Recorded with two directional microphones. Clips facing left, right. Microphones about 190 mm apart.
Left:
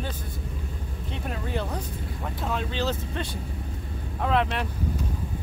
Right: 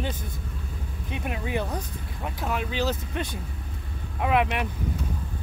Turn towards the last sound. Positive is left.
turn(degrees=-15)  # may be behind; listen again after turning